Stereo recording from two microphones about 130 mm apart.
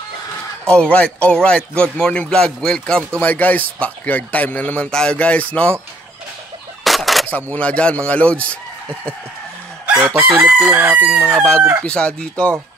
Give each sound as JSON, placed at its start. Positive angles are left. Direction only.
{"t": 0.7, "sound": "a man's voice", "side_deg": 5}
{"t": 6.8, "sound": "fowl", "side_deg": 0}
{"t": 7.5, "sound": "a man's voice", "side_deg": 10}
{"t": 9.8, "sound": "chicken", "side_deg": -15}
{"t": 11.1, "sound": "crowing", "side_deg": -20}
{"t": 11.8, "sound": "a man's voice", "side_deg": 10}